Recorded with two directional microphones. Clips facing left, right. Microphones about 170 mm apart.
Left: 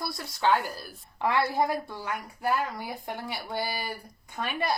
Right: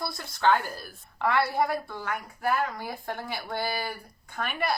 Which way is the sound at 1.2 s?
20° left (ahead or behind).